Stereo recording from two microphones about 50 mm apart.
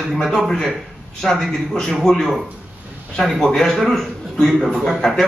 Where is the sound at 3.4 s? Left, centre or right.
Centre.